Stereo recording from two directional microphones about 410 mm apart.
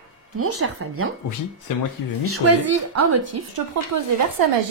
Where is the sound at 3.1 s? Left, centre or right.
Right.